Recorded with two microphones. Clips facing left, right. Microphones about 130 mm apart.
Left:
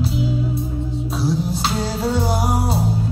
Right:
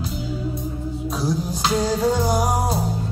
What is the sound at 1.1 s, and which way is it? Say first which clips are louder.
Music: left 3 dB; 35° left (ahead or behind).